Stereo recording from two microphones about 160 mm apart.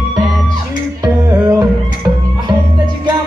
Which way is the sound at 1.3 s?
20° right (ahead or behind).